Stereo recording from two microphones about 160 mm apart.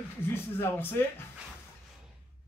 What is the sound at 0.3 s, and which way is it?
Speech, 15° left (ahead or behind).